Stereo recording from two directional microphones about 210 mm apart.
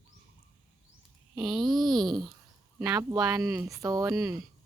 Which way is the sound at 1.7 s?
Centre (ahead or behind).